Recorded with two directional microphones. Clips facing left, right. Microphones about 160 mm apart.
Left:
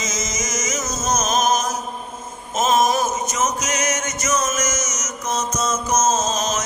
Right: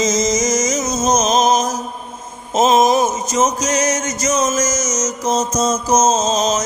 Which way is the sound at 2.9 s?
30° right (ahead or behind).